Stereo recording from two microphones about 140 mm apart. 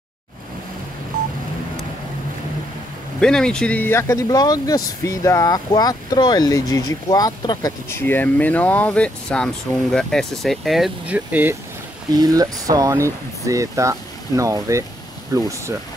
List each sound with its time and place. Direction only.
3.2 s speech: 5° left (ahead or behind); by 8.0 s 25° left (ahead or behind)
8.0 s speech: 15° left (ahead or behind); by 11.5 s 10° right (ahead or behind)
12.1 s speech: 25° right (ahead or behind)